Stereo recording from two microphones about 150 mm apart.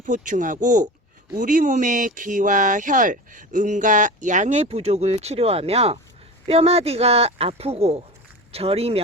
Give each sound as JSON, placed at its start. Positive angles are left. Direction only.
{"t": 0.0, "sound": "speech", "side_deg": -60}